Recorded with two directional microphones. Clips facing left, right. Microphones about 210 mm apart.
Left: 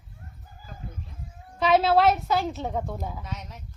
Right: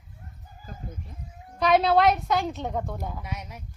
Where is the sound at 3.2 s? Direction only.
10° right (ahead or behind).